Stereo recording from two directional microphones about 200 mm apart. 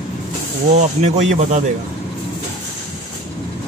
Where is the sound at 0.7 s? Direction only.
35° right (ahead or behind).